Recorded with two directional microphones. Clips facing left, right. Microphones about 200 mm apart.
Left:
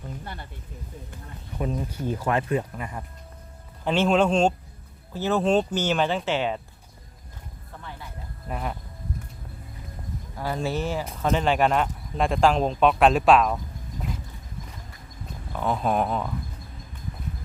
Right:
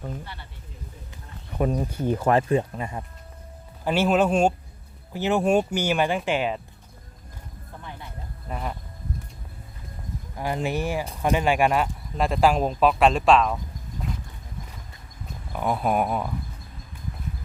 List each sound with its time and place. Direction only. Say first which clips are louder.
1.5 s speech: right 4 dB; 50° right (ahead or behind)
2.3 s speech: right 3 dB; 30° right (ahead or behind)
3.8 s speech: even; 5° right (ahead or behind)
8.4 s speech: left 1 dB; 5° left (ahead or behind)
10.3 s speech: right 1 dB; 15° right (ahead or behind); by 13.6 s 5° left (ahead or behind)
15.5 s speech: right 1 dB; 10° right (ahead or behind)